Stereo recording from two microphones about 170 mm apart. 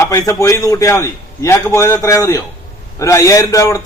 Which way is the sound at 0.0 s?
20° left (ahead or behind).